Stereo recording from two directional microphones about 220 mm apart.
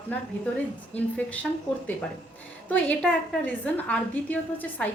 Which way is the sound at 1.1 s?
5° left (ahead or behind).